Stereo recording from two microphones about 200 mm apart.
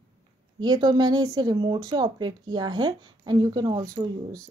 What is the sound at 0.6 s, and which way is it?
Speech, 20° right (ahead or behind).